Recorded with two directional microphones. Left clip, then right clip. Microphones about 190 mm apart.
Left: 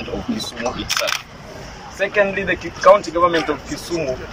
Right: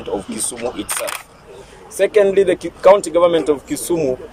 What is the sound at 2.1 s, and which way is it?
Speech, 25° right (ahead or behind).